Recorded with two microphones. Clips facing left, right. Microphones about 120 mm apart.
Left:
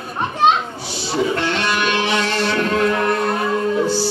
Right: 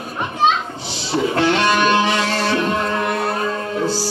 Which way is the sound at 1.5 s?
40° right (ahead or behind).